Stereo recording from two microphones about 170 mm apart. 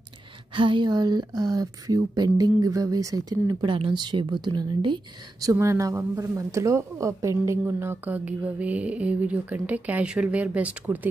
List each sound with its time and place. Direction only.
0.6 s speech: 30° right (ahead or behind); by 11.1 s 10° right (ahead or behind)